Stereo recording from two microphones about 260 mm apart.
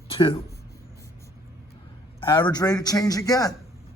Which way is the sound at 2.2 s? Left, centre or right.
Centre.